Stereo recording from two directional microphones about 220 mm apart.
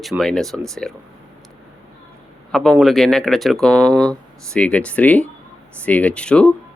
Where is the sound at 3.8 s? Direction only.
15° right (ahead or behind).